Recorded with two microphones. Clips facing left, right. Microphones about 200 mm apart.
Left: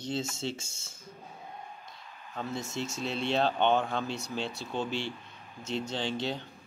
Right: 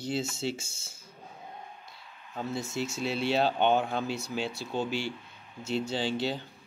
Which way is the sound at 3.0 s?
5° right (ahead or behind).